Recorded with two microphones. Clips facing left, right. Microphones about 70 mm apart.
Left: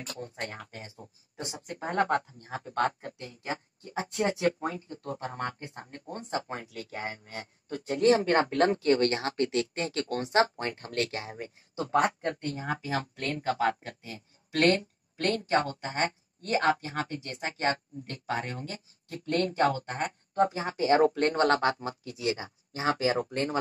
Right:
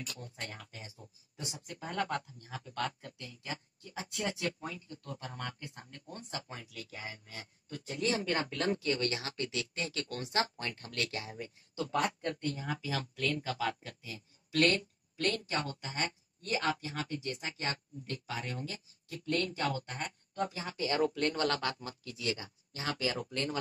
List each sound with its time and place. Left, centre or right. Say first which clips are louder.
0.0 s speech: left 6 dB; left